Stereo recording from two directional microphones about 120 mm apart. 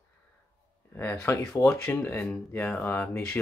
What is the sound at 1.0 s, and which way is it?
Speech, 15° left (ahead or behind).